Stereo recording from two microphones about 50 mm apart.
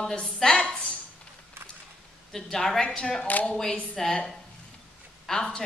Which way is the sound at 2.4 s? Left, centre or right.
Centre.